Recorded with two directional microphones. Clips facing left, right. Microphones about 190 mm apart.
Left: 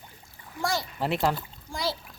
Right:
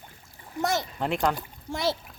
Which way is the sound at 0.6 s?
20° right (ahead or behind).